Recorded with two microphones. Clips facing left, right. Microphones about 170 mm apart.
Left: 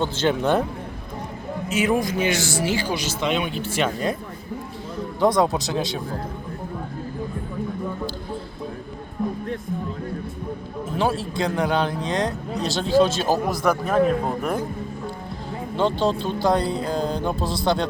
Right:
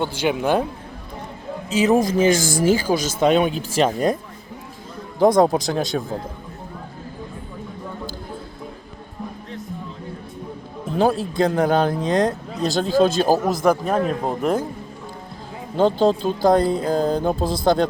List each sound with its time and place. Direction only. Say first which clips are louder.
0.0 s a man's voice: even; 10° right (ahead or behind)
1.7 s speech: right 5 dB; 35° right (ahead or behind)
5.2 s speech: right 4 dB; 50° right (ahead or behind)
11.3 s speech: right 5 dB; 45° right (ahead or behind)
13.3 s a man's voice: right 3 dB; 20° right (ahead or behind)
15.7 s speech: right 5 dB; 45° right (ahead or behind)